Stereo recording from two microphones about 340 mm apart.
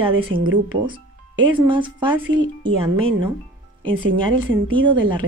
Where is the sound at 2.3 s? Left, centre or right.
Right.